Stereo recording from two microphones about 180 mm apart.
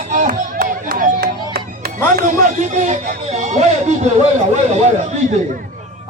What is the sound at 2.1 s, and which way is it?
Speech, 45° right (ahead or behind).